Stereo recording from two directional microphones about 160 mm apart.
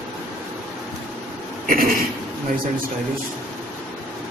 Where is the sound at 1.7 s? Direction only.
65° right (ahead or behind).